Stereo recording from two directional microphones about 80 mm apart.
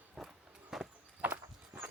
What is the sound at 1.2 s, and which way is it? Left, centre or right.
Walk, centre.